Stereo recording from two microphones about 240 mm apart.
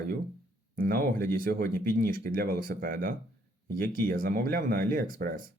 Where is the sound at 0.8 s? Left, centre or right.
Right.